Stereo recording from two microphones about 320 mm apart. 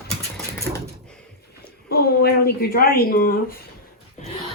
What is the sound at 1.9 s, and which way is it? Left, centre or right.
Speech, left.